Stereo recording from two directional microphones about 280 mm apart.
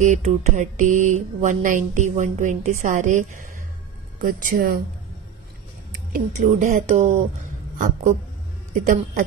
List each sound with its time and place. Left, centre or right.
0.0 s mantra: right
6.1 s mantra: right